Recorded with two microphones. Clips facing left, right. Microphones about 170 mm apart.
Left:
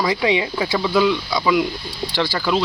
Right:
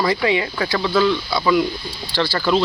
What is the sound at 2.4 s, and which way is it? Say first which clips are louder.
Speech: right 3 dB; 5° left (ahead or behind).